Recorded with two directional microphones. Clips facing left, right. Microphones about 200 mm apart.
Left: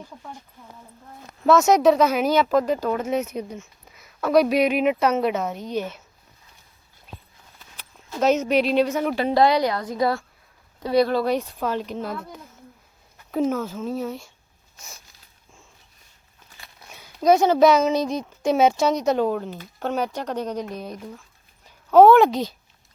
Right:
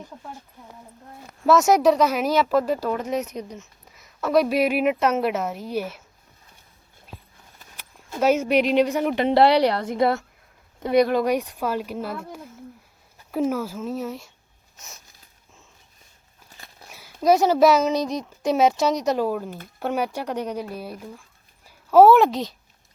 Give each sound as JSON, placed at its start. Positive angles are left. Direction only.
{"t": 1.5, "sound": "speech", "side_deg": 0}
{"t": 8.2, "sound": "a woman's voice", "side_deg": -10}
{"t": 13.3, "sound": "speech", "side_deg": -5}
{"t": 16.9, "sound": "speech", "side_deg": 0}